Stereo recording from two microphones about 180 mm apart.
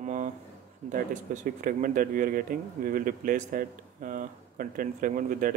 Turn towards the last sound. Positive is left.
turn(degrees=-45)  # may be behind; listen again after turning